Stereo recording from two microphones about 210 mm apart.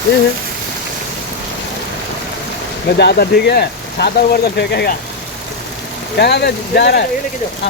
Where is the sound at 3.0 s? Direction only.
50° left (ahead or behind).